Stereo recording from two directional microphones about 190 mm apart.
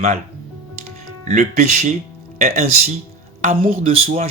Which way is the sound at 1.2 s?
40° right (ahead or behind).